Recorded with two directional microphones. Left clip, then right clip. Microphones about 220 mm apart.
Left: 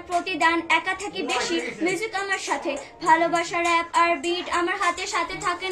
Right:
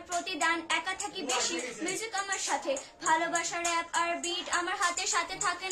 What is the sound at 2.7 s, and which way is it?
Child singing, 20° right (ahead or behind).